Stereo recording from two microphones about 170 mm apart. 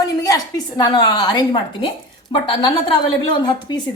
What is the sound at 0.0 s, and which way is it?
A woman's voice, 20° left (ahead or behind).